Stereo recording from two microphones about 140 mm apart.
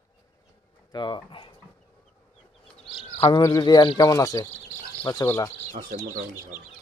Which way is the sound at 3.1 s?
40° left (ahead or behind).